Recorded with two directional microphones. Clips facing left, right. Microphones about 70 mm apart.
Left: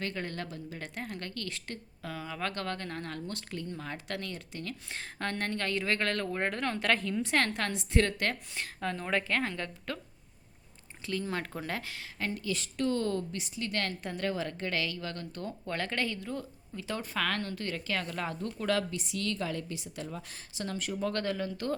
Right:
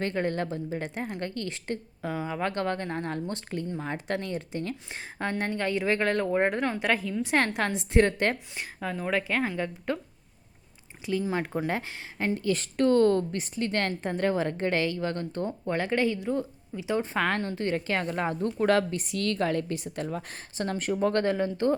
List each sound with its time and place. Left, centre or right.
0.0 s a woman's voice: right; by 7.3 s centre
7.3 s a woman's voice: right
8.5 s speech: centre
11.0 s a woman's voice: centre
12.4 s a woman's voice: right; by 17.1 s centre
17.2 s a woman's voice: right